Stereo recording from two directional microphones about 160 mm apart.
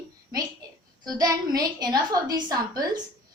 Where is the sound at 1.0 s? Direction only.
25° right (ahead or behind).